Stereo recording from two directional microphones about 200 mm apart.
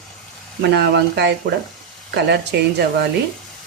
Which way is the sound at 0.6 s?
60° right (ahead or behind).